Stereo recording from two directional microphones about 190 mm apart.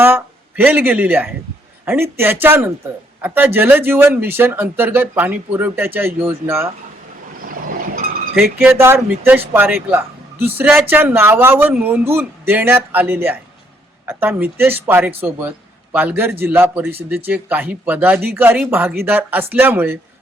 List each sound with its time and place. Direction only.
0.0 s speech: 10° right (ahead or behind)
7.3 s vehicle: 50° right (ahead or behind)
8.5 s speech: 10° right (ahead or behind)